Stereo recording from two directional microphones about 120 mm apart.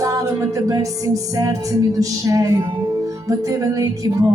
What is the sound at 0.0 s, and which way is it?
Music, 30° right (ahead or behind).